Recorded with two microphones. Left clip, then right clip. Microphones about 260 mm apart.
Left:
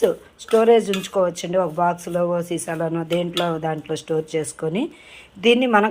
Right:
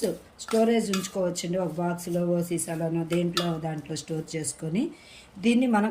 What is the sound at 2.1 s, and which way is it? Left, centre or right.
A man's voice, left.